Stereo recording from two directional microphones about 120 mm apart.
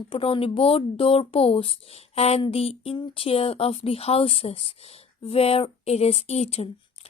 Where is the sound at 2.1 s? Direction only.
60° left (ahead or behind).